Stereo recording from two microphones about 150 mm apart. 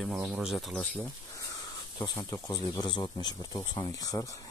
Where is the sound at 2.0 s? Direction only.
15° left (ahead or behind).